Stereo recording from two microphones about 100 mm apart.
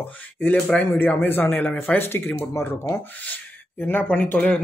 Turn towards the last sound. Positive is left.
turn(degrees=15)  # may be behind; listen again after turning